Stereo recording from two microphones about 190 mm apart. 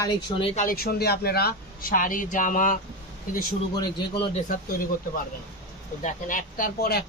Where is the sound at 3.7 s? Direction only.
20° left (ahead or behind).